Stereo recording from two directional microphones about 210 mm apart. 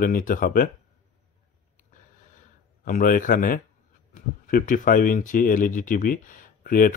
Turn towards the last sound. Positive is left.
turn(degrees=40)  # may be behind; listen again after turning